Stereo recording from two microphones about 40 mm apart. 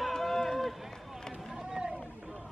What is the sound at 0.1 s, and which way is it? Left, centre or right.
Run, centre.